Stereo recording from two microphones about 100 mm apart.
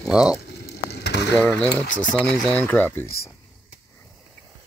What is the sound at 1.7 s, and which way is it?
Speech, 15° left (ahead or behind).